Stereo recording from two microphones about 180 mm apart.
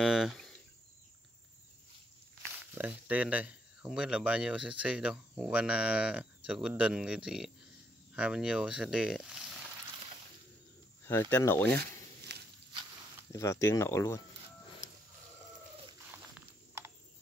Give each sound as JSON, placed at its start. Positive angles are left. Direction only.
{"t": 0.0, "sound": "speech", "side_deg": -5}
{"t": 2.7, "sound": "speech", "side_deg": -10}
{"t": 11.3, "sound": "speech", "side_deg": 10}
{"t": 12.3, "sound": "walk", "side_deg": -70}
{"t": 13.3, "sound": "speech", "side_deg": 15}
{"t": 16.1, "sound": "a sound", "side_deg": -15}